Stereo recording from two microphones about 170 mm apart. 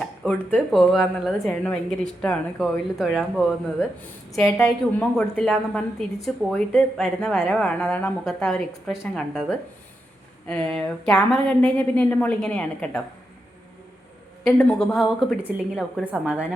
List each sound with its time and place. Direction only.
0.0 s speech: 5° left (ahead or behind)
4.6 s a woman's voice: 5° left (ahead or behind)
14.4 s speech: 5° left (ahead or behind)